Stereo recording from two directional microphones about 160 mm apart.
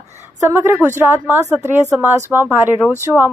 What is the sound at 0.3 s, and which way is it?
A woman's voice, 15° right (ahead or behind).